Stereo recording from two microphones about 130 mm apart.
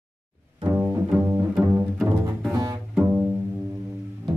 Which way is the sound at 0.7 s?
15° right (ahead or behind).